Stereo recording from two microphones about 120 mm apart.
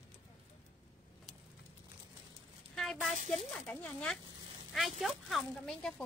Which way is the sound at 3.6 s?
10° left (ahead or behind).